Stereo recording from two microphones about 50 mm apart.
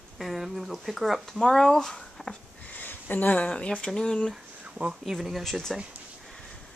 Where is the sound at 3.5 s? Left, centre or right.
Centre.